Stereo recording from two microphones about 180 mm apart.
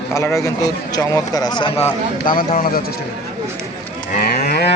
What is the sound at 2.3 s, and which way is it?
Speech, 50° left (ahead or behind).